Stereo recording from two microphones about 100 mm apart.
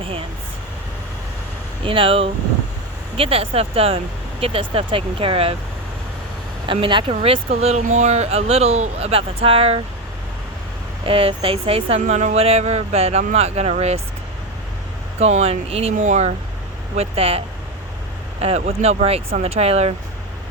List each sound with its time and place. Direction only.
0.0 s speech: 65° right (ahead or behind)
1.8 s speech: 65° right (ahead or behind)
6.7 s speech: 60° right (ahead or behind); by 9.8 s 75° right (ahead or behind)
11.0 s speech: 70° right (ahead or behind); by 14.0 s 90° right
15.2 s speech: 90° right